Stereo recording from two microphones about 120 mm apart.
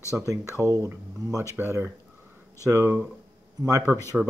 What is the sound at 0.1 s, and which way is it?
Speech, 25° right (ahead or behind).